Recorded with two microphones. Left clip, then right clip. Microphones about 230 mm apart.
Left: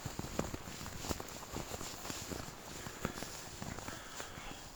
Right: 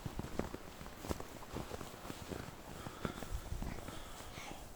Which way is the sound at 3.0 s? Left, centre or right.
Left.